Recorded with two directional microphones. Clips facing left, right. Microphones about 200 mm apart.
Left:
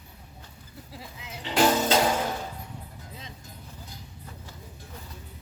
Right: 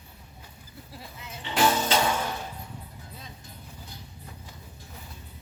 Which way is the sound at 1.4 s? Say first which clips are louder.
Left 2 dB; 35° left (ahead or behind).